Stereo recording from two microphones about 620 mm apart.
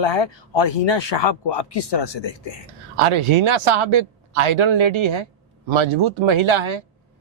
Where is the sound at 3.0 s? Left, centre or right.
Right.